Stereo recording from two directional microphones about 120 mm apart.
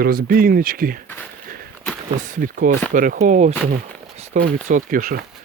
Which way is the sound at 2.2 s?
90° right.